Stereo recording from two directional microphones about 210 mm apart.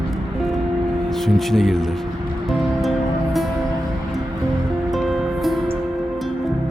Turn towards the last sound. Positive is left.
turn(degrees=0)  # may be behind; listen again after turning